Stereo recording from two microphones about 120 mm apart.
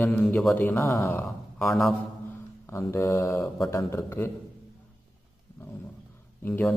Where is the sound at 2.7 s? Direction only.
25° left (ahead or behind).